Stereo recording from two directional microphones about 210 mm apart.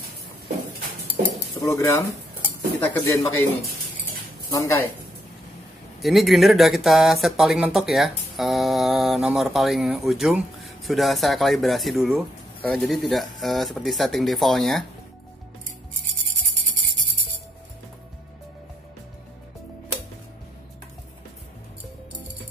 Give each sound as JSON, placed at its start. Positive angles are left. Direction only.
{"t": 1.6, "sound": "speech", "side_deg": 15}
{"t": 4.5, "sound": "speech", "side_deg": 15}
{"t": 5.9, "sound": "speech", "side_deg": 0}